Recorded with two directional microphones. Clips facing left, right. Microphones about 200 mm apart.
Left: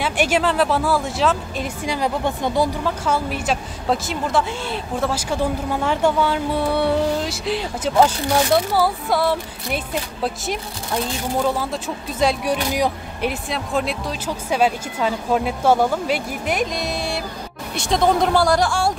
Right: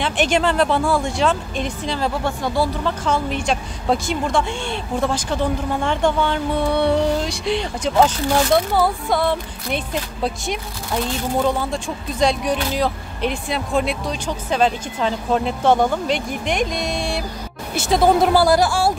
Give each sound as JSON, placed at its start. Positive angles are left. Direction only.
{"t": 0.0, "sound": "speech", "side_deg": 5}
{"t": 1.9, "sound": "speech", "side_deg": 15}